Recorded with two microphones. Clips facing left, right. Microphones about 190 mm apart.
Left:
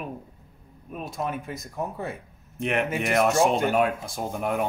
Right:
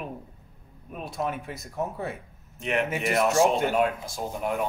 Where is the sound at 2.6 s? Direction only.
55° left (ahead or behind).